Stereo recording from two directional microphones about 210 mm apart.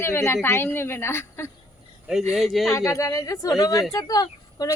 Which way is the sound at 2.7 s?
15° left (ahead or behind).